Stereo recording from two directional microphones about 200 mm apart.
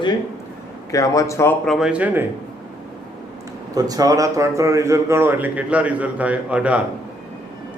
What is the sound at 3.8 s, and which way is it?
Speech, 20° right (ahead or behind).